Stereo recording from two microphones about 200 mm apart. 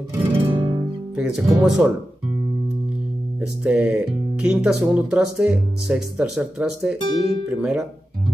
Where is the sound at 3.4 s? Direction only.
5° right (ahead or behind).